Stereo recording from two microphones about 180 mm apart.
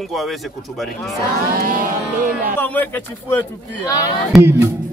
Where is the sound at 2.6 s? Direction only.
10° left (ahead or behind).